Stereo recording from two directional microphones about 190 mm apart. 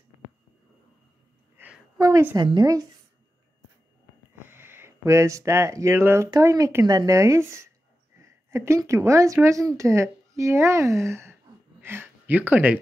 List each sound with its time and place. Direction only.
1.6 s a sound: 10° right (ahead or behind)
2.0 s a woman's voice: 15° right (ahead or behind)
4.4 s a woman's voice: 10° right (ahead or behind)